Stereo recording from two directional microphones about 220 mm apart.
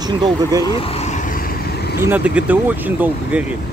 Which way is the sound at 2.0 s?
10° right (ahead or behind).